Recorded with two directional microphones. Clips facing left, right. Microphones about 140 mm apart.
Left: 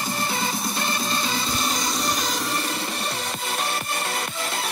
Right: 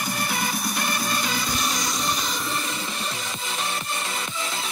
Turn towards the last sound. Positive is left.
turn(degrees=60)  # may be behind; listen again after turning